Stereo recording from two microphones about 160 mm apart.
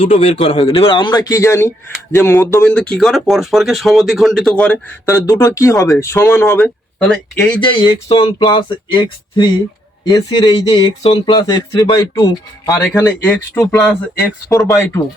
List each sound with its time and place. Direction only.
0.0 s a man's voice: 45° left (ahead or behind)
0.6 s speech: 35° left (ahead or behind); by 4.8 s 5° left (ahead or behind)
5.0 s speech: 20° left (ahead or behind); by 7.5 s 5° left (ahead or behind)
7.5 s a sound: 30° left (ahead or behind)
10.0 s speech: 25° left (ahead or behind); by 14.8 s 5° left (ahead or behind)